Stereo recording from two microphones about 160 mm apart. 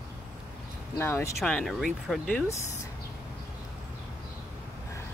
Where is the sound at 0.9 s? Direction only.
15° left (ahead or behind).